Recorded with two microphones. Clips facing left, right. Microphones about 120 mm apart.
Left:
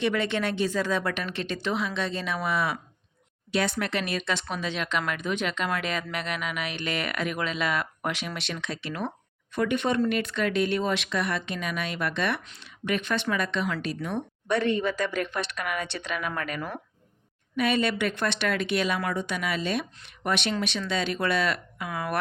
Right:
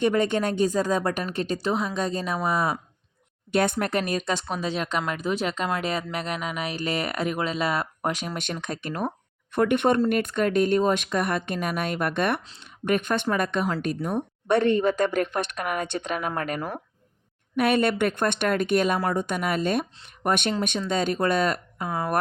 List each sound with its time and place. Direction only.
0.0 s speech: 45° right (ahead or behind)
3.5 s speech: 50° right (ahead or behind)
9.5 s speech: 55° right (ahead or behind); by 16.8 s 35° right (ahead or behind)
17.6 s speech: 55° right (ahead or behind); by 22.1 s 30° right (ahead or behind)